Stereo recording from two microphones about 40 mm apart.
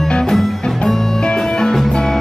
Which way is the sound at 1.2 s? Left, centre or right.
Centre.